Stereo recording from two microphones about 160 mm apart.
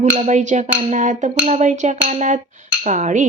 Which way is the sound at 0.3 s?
45° right (ahead or behind).